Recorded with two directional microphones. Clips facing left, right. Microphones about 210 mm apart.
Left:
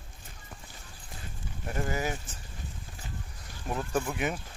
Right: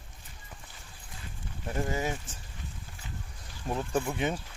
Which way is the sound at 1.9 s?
25° right (ahead or behind).